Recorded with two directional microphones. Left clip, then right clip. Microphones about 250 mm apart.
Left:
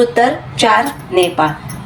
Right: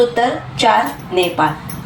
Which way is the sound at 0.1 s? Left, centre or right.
Left.